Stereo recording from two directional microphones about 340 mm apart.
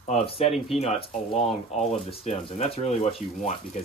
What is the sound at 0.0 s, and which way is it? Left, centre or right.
Speech, centre.